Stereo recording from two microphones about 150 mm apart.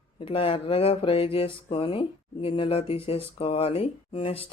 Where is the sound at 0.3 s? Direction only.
35° left (ahead or behind).